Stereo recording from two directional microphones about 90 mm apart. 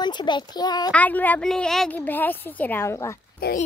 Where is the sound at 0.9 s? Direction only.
20° left (ahead or behind).